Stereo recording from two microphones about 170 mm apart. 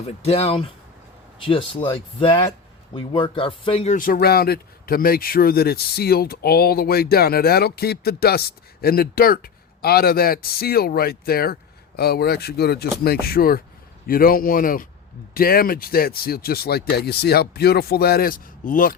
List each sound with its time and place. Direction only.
0.1 s speech: 40° left (ahead or behind)
3.9 s speech: 55° left (ahead or behind)